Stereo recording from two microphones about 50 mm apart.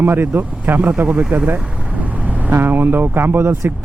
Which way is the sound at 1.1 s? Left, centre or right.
Right.